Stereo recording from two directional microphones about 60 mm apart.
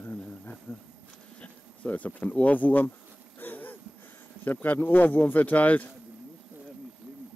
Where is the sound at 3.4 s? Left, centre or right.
Left.